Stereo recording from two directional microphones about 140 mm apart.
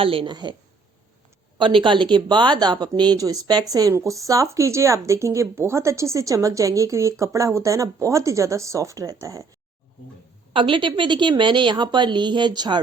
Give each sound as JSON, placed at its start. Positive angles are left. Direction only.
{"t": 0.0, "sound": "a woman's voice", "side_deg": -40}
{"t": 1.5, "sound": "speech", "side_deg": -35}
{"t": 10.5, "sound": "a woman's voice", "side_deg": -35}